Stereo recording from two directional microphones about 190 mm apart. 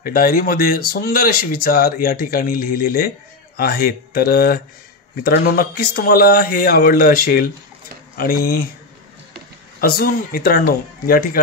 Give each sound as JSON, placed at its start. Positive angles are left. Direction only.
{"t": 0.0, "sound": "speech", "side_deg": 50}
{"t": 9.8, "sound": "speech", "side_deg": 50}